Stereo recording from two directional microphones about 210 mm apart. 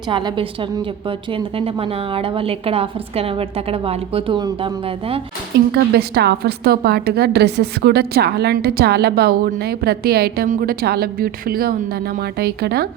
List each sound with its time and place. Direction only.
0.1 s a woman's voice: 20° right (ahead or behind)
5.7 s a woman's voice: 50° right (ahead or behind)